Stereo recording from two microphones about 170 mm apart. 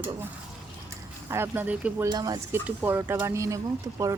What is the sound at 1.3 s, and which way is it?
Speech, 10° right (ahead or behind).